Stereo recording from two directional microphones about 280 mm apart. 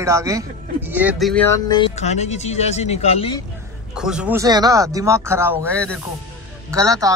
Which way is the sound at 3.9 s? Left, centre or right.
Centre.